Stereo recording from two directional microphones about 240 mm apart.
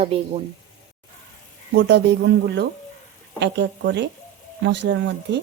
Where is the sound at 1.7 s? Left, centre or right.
Right.